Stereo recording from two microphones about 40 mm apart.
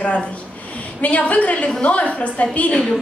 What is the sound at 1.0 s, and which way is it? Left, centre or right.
A woman's voice, left.